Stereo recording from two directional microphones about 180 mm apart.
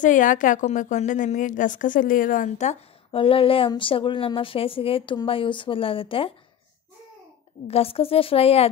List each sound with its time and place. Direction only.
0.0 s a woman's voice: 45° left (ahead or behind); by 6.3 s 30° left (ahead or behind)
7.6 s a woman's voice: 35° left (ahead or behind)